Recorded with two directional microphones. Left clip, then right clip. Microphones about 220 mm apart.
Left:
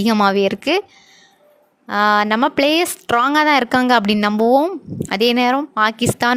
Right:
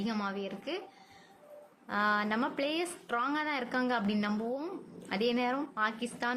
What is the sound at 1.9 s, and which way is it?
Speech, 45° left (ahead or behind).